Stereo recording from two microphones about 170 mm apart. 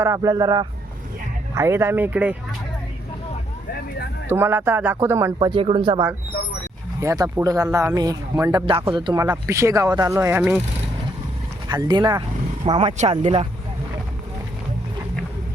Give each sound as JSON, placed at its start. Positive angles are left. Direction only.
{"t": 0.0, "sound": "speech", "side_deg": -20}
{"t": 4.3, "sound": "speech", "side_deg": -15}
{"t": 5.5, "sound": "speech", "side_deg": -30}
{"t": 7.0, "sound": "speech", "side_deg": -15}
{"t": 11.7, "sound": "speech", "side_deg": -25}